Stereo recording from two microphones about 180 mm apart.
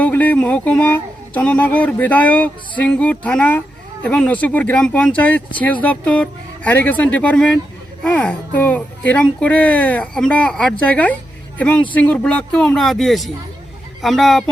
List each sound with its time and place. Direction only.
0.0 s speech: 10° left (ahead or behind)